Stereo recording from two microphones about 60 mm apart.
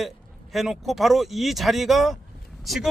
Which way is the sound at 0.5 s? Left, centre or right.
Centre.